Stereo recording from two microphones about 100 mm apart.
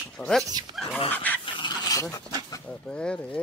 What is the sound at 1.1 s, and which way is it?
Dog, 15° left (ahead or behind).